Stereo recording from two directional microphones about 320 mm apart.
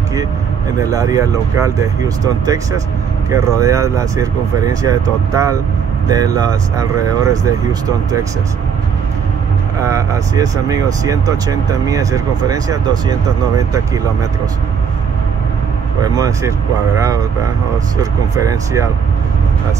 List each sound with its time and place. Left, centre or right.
0.8 s speech: centre
9.8 s speech: centre
16.0 s speech: centre
18.4 s speech: centre